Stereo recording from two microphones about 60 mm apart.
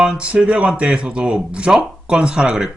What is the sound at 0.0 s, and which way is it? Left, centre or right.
Speech, centre.